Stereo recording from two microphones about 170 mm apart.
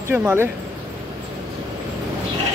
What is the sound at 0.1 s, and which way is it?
Speech, 10° right (ahead or behind).